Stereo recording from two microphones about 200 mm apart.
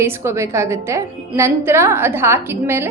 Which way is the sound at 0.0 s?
15° right (ahead or behind).